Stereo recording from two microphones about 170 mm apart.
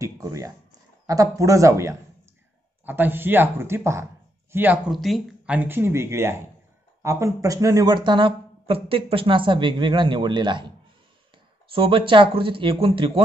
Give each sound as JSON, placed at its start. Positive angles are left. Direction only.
{"t": 0.0, "sound": "a sound", "side_deg": -20}
{"t": 2.8, "sound": "speech", "side_deg": -10}
{"t": 5.6, "sound": "speech", "side_deg": -15}
{"t": 11.7, "sound": "speech", "side_deg": -30}